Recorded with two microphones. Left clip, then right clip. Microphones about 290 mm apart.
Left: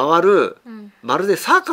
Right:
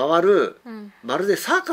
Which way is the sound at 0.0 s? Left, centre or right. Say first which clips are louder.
Left 3 dB; left.